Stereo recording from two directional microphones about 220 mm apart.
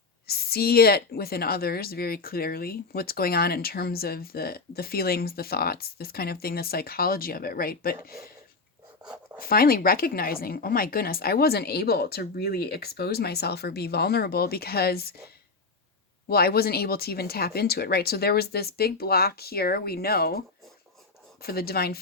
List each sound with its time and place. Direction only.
0.3 s a woman's voice: 45° left (ahead or behind)
9.4 s a woman's voice: 40° left (ahead or behind)
16.3 s a woman's voice: 45° left (ahead or behind)
21.4 s a woman's voice: 45° left (ahead or behind)